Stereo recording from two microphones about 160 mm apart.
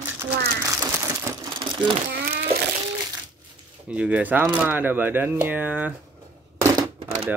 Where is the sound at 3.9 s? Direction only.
10° right (ahead or behind).